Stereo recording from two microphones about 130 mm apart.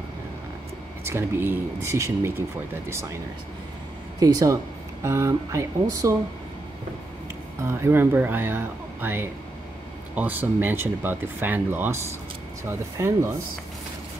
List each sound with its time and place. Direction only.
1.0 s speech: 20° right (ahead or behind)
4.2 s speech: 25° right (ahead or behind)
7.6 s speech: 20° right (ahead or behind)